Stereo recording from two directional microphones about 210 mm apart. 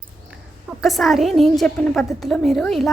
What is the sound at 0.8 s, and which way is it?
A woman's voice, centre (ahead or behind).